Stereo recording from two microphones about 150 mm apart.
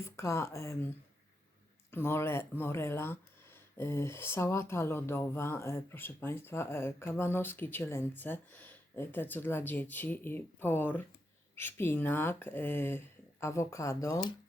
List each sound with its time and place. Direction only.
0.0 s speech: 20° left (ahead or behind)